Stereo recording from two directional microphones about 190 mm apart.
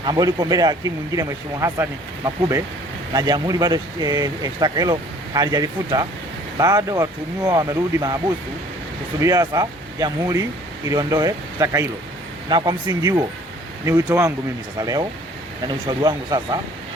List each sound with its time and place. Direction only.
0.0 s speech: 20° right (ahead or behind)
9.2 s speech: 20° right (ahead or behind)